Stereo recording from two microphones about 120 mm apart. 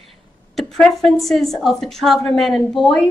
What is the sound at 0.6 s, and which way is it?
A woman's voice, centre (ahead or behind).